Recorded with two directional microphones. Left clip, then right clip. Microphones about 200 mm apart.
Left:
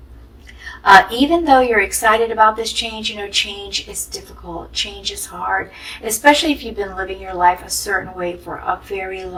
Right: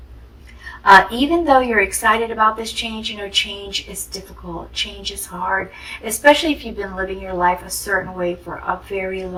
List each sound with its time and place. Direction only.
0.9 s a woman's voice: 35° left (ahead or behind)